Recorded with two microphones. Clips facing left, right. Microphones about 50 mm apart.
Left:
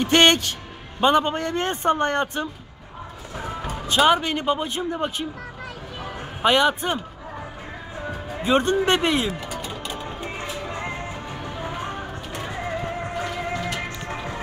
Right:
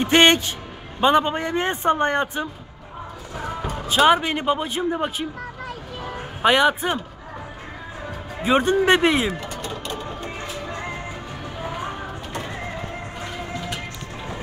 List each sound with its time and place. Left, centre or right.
0.0 s speech: centre
3.3 s music: centre
3.8 s speech: centre
8.4 s speech: centre
9.5 s music: centre
11.4 s a sound: centre